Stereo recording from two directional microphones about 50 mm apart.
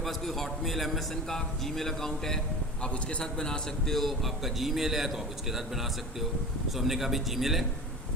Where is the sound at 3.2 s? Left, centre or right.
Centre.